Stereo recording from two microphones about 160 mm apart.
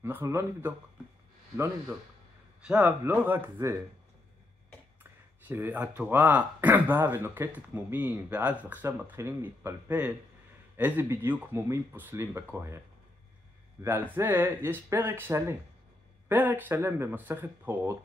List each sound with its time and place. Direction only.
0.0 s speech: 15° right (ahead or behind)
2.6 s speech: 10° right (ahead or behind)
5.5 s speech: 15° right (ahead or behind)
13.8 s speech: 10° right (ahead or behind)